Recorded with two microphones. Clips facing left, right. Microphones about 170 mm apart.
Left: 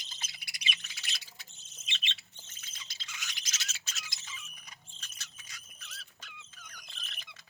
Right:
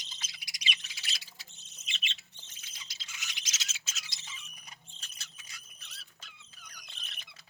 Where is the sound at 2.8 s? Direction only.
55° left (ahead or behind).